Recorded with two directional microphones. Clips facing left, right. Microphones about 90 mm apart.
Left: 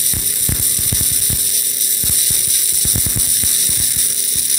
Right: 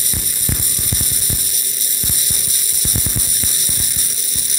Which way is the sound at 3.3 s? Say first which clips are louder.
Even; 25° left (ahead or behind).